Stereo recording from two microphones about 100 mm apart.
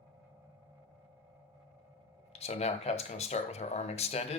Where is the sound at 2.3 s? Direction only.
90° left.